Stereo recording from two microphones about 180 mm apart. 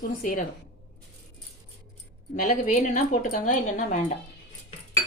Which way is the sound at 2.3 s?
45° left (ahead or behind).